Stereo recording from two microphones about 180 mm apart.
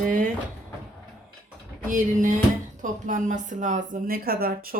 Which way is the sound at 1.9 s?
45° right (ahead or behind).